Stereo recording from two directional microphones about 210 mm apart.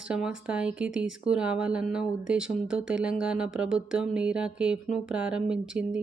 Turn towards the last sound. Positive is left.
turn(degrees=-5)  # may be behind; listen again after turning